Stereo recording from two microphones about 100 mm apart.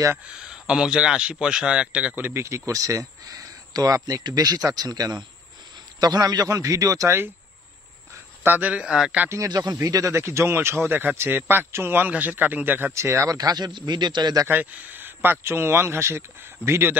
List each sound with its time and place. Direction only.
0.4 s a man's voice: 5° right (ahead or behind); by 7.2 s 35° right (ahead or behind)
8.5 s speech: 15° right (ahead or behind)
8.8 s a man's voice: 5° right (ahead or behind)
9.2 s speech: 25° right (ahead or behind)
9.5 s a man's voice: 40° right (ahead or behind)
10.1 s a man's voice: 25° right (ahead or behind); by 14.4 s 45° right (ahead or behind)
14.5 s speech: 20° right (ahead or behind)